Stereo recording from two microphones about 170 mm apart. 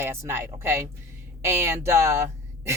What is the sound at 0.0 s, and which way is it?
Speech, 15° right (ahead or behind).